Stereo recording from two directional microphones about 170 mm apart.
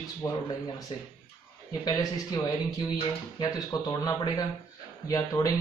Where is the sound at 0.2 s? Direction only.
15° left (ahead or behind).